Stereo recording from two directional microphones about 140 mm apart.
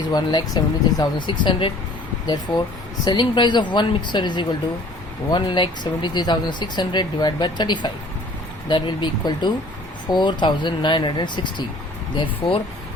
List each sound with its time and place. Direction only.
0.1 s speech: 30° left (ahead or behind)
3.0 s speech: 35° left (ahead or behind)